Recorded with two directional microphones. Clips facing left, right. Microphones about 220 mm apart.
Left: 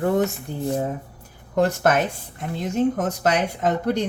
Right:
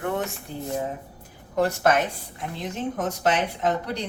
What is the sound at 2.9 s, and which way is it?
Speech, 50° left (ahead or behind).